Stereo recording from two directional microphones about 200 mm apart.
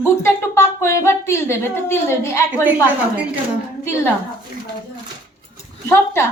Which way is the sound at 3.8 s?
10° left (ahead or behind).